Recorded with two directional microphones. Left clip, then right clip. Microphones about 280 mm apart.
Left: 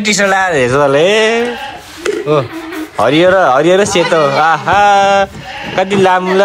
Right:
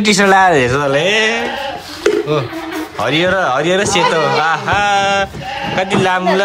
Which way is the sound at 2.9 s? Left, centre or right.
Centre.